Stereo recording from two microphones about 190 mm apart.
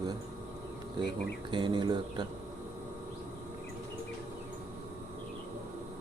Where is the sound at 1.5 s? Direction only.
25° right (ahead or behind).